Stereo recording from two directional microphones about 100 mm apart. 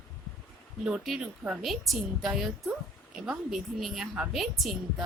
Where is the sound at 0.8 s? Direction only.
5° right (ahead or behind).